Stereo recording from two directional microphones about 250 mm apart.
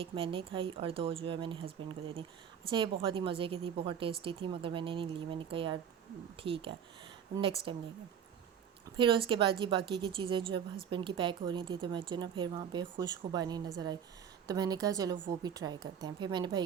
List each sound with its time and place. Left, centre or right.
0.0 s a woman's voice: right
9.0 s a woman's voice: centre